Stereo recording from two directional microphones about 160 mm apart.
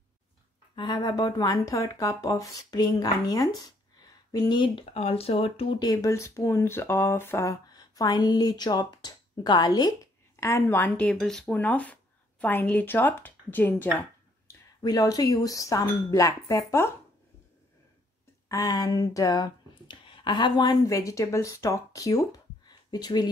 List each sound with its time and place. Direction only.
0.7 s speech: 25° left (ahead or behind)
5.8 s speech: 20° left (ahead or behind)
14.8 s speech: 25° left (ahead or behind)
18.5 s speech: 20° left (ahead or behind)